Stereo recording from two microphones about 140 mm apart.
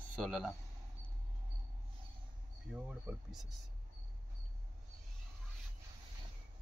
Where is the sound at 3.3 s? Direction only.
Centre (ahead or behind).